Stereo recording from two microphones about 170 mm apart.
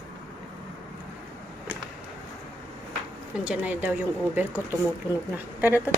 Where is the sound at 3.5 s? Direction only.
10° right (ahead or behind).